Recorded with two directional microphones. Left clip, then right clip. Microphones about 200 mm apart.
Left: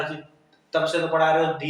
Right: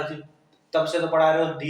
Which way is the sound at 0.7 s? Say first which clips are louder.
Even; 15° right (ahead or behind).